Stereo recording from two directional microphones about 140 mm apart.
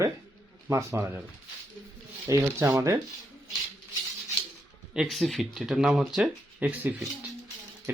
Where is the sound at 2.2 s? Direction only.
20° right (ahead or behind).